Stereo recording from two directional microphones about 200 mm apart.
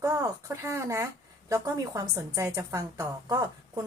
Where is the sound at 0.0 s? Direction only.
15° right (ahead or behind).